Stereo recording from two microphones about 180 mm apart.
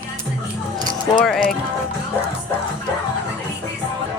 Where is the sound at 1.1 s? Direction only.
Centre (ahead or behind).